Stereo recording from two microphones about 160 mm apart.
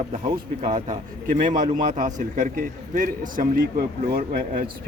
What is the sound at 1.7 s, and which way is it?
A man's voice, 50° right (ahead or behind).